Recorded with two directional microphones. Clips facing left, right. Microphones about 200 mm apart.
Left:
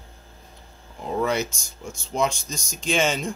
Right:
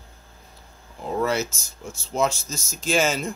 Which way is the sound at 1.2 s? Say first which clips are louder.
Even; 5° right (ahead or behind).